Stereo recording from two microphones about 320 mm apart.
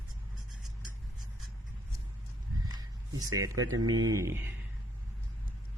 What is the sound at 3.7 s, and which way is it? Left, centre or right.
Speech, right.